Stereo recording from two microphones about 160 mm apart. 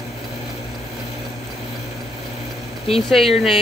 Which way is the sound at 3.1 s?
Centre (ahead or behind).